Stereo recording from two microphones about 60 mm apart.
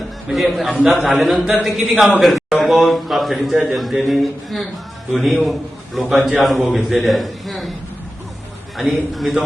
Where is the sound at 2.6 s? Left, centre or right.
Centre.